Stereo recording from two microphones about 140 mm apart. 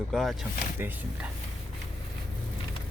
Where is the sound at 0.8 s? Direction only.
15° right (ahead or behind).